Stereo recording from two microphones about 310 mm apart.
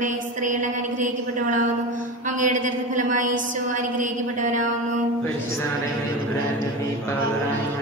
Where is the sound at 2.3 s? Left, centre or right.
Right.